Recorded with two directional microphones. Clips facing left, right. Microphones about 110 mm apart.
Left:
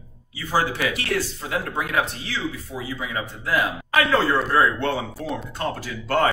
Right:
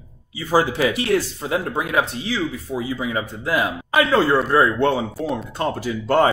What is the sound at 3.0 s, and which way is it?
A man's voice, 20° right (ahead or behind).